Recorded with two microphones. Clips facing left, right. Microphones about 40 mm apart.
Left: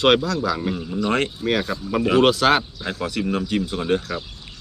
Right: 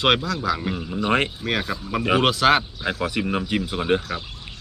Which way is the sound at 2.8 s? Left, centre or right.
Centre.